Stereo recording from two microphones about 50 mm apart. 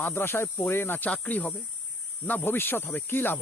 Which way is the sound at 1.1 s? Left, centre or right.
Left.